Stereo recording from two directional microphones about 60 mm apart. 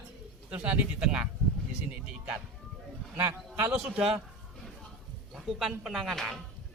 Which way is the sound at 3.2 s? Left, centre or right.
Right.